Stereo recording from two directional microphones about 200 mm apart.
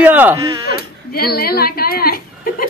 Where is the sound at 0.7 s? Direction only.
50° left (ahead or behind).